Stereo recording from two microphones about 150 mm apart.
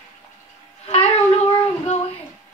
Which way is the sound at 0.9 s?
45° left (ahead or behind).